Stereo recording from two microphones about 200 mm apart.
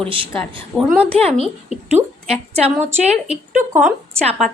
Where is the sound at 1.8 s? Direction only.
30° right (ahead or behind).